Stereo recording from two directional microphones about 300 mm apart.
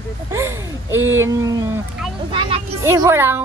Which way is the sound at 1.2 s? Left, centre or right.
Centre.